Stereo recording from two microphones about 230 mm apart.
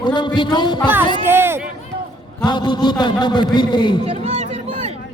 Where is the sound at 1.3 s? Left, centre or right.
Centre.